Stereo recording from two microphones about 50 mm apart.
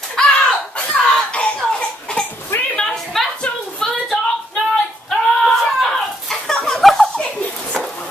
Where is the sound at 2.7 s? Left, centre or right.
Centre.